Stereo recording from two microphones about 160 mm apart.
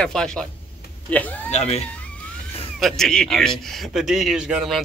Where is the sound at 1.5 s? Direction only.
40° left (ahead or behind).